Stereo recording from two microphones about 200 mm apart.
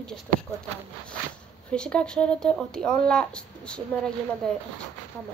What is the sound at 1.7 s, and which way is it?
Speech, 5° left (ahead or behind).